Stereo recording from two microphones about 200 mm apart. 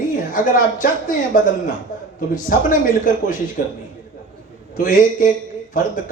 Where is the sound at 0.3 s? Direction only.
40° left (ahead or behind).